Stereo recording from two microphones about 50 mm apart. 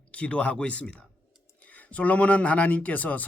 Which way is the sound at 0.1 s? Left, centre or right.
Left.